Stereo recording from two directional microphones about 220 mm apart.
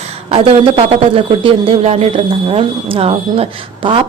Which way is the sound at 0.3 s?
25° right (ahead or behind).